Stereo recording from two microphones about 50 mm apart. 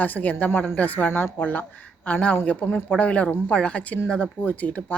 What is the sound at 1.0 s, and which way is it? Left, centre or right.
Speech, left.